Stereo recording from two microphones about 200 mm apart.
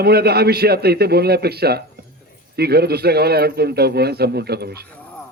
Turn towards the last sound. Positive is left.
turn(degrees=-55)  # may be behind; listen again after turning